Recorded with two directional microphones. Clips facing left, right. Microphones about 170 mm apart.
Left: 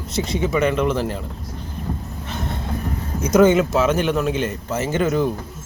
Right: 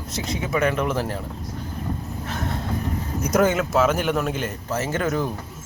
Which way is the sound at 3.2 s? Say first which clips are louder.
Left 6 dB; 25° left (ahead or behind).